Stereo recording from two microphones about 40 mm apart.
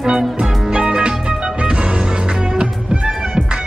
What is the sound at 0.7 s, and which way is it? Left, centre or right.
Music, right.